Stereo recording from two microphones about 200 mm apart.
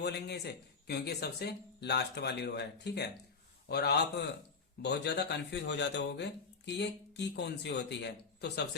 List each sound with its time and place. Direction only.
0.0 s speech: 55° left (ahead or behind)